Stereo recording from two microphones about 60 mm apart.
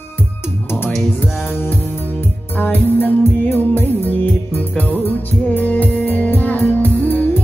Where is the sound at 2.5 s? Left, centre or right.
Left.